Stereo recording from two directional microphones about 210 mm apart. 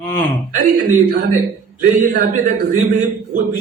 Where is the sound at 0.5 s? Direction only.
40° right (ahead or behind).